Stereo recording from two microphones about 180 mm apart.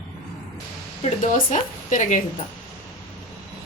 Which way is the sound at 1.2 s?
45° left (ahead or behind).